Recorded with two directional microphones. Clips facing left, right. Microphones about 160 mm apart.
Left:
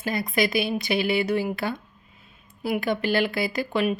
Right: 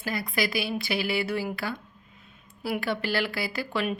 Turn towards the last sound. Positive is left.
turn(degrees=20)  # may be behind; listen again after turning